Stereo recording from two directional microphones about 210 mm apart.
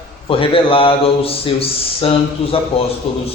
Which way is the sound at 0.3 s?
25° left (ahead or behind).